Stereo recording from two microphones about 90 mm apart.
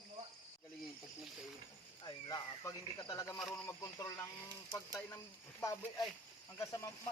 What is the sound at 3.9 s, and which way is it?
Speech, 40° left (ahead or behind).